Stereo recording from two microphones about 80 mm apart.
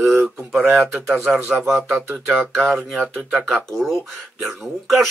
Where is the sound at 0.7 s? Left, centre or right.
Centre.